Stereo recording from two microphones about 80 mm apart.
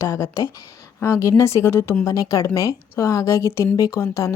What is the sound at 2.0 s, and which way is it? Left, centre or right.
Speech, left.